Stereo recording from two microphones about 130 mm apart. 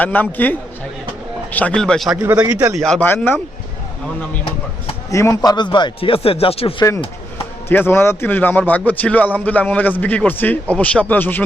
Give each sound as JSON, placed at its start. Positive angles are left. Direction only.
{"t": 0.0, "sound": "a man's voice", "side_deg": 15}
{"t": 2.2, "sound": "a man's voice", "side_deg": -10}
{"t": 2.7, "sound": "speech", "side_deg": 5}
{"t": 3.0, "sound": "a man's voice", "side_deg": 15}
{"t": 5.1, "sound": "speech", "side_deg": 25}
{"t": 5.5, "sound": "speech", "side_deg": 35}
{"t": 7.7, "sound": "a man's voice", "side_deg": 15}